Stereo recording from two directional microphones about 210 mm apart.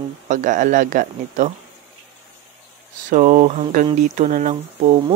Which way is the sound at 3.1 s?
40° right (ahead or behind).